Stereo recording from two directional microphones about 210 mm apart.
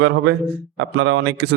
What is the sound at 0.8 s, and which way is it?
Speech, 60° right (ahead or behind).